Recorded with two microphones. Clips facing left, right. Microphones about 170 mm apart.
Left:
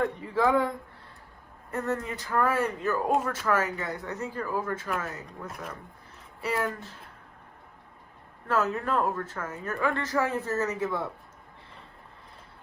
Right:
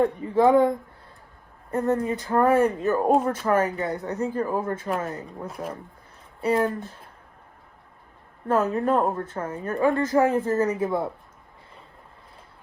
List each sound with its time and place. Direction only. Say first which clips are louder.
0.0 s speech: right 6 dB; 20° right (ahead or behind)
1.7 s speech: right 7 dB; 30° right (ahead or behind)
8.4 s speech: right 5 dB; 30° right (ahead or behind)